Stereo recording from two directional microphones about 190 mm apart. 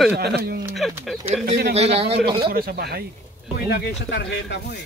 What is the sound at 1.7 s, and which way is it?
Speech, 30° right (ahead or behind).